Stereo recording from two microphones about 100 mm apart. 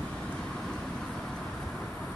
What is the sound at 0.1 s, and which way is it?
Vehicle, 10° left (ahead or behind).